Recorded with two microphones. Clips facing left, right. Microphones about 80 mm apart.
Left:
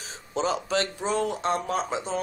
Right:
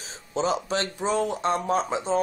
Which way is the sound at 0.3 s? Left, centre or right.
Right.